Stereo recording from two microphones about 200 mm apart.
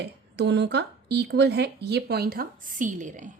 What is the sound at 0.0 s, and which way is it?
A woman's voice, 60° right (ahead or behind).